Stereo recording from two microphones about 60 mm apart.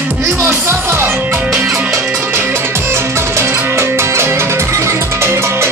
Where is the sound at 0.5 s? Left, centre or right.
Right.